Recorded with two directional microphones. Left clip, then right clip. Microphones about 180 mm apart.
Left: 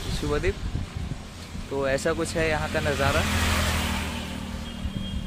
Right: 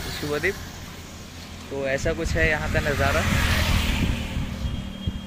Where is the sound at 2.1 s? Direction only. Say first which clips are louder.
Right 2 dB; 20° left (ahead or behind).